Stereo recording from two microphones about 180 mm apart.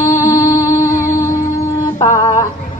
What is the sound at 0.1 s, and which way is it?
Music, 20° left (ahead or behind).